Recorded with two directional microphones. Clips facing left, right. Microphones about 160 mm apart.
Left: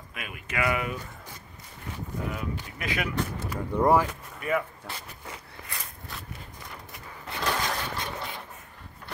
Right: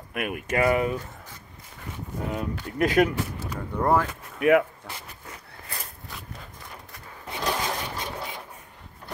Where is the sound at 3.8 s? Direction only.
10° left (ahead or behind).